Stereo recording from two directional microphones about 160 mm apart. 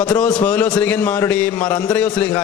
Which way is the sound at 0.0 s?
5° left (ahead or behind).